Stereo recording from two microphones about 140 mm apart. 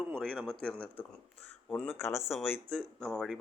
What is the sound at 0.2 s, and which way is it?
A man's voice, 5° left (ahead or behind).